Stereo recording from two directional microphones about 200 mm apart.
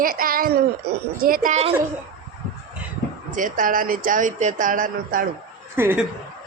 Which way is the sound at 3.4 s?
40° right (ahead or behind).